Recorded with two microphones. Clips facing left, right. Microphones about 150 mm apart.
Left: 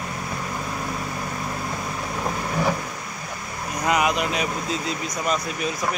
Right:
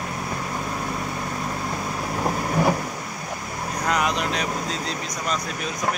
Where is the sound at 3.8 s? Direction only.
5° left (ahead or behind).